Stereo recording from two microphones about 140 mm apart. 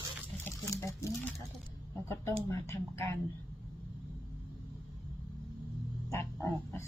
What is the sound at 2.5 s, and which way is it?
Speech, 20° left (ahead or behind).